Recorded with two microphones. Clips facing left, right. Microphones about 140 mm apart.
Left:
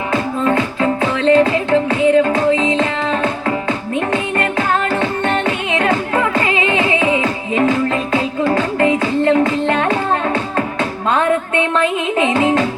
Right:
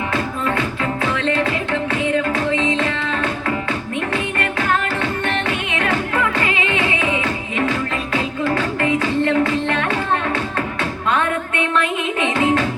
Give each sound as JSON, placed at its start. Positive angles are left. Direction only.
{"t": 0.1, "sound": "music", "side_deg": 30}
{"t": 11.1, "sound": "music", "side_deg": 30}